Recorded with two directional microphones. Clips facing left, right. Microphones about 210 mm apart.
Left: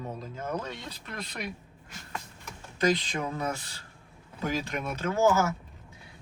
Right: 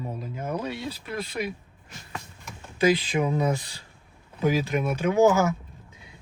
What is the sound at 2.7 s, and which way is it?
Speech, 5° right (ahead or behind).